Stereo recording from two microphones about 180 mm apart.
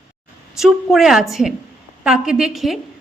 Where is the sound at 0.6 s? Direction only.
Centre (ahead or behind).